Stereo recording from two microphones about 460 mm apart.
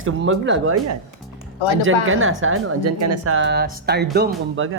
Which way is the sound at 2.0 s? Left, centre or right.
Right.